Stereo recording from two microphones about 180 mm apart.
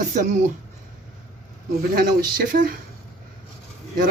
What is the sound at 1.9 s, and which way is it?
Speech, 55° right (ahead or behind).